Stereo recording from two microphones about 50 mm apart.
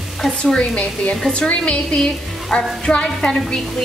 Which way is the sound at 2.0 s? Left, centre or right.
Centre.